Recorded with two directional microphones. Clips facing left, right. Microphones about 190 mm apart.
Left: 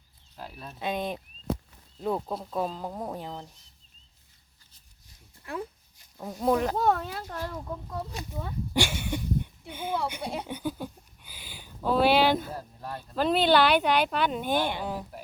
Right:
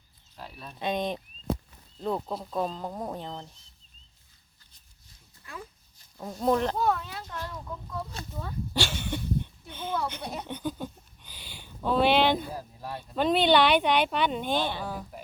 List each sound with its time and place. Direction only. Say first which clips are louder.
0.3 s speech: left 1 dB; 5° left (ahead or behind)
5.4 s a sound: left 8 dB; 55° left (ahead or behind)
6.3 s speech: even; 10° left (ahead or behind)
6.7 s speech: left 2 dB; 40° left (ahead or behind)
8.1 s speech: left 1 dB; 15° left (ahead or behind)